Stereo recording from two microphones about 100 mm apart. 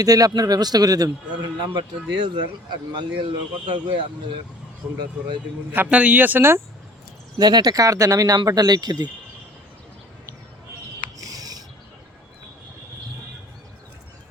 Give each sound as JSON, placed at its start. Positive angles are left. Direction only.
{"t": 0.0, "sound": "a man's voice", "side_deg": -35}
{"t": 2.1, "sound": "speech", "side_deg": -55}
{"t": 5.7, "sound": "speech", "side_deg": -15}
{"t": 7.3, "sound": "a man's voice", "side_deg": -45}
{"t": 11.2, "sound": "a sound", "side_deg": -40}